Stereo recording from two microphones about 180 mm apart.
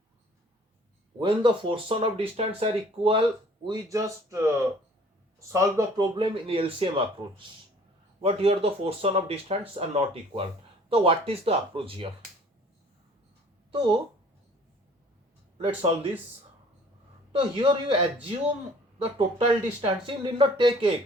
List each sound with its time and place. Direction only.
1.2 s speech: 25° right (ahead or behind)
5.5 s speech: 15° right (ahead or behind)
6.1 s speech: 30° right (ahead or behind)
15.5 s speech: 30° right (ahead or behind)
17.3 s speech: 30° right (ahead or behind)